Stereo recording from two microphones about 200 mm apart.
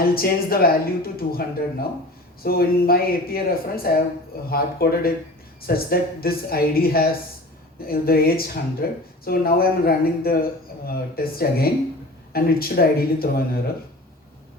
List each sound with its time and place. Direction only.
0.0 s speech: 50° left (ahead or behind)